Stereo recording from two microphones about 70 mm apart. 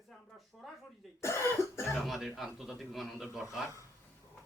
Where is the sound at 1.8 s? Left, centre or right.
Centre.